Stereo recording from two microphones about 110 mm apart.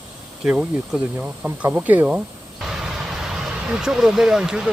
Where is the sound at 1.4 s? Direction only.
15° right (ahead or behind).